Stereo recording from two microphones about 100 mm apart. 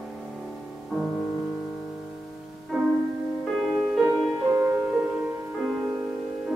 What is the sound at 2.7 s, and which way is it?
Music, centre (ahead or behind).